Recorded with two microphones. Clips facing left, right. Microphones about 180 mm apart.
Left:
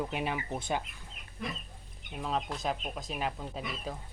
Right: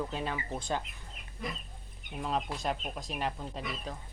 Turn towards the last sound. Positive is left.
turn(degrees=5)  # may be behind; listen again after turning